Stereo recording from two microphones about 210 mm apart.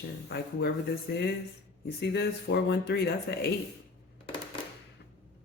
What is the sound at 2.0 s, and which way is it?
Speech, 55° left (ahead or behind).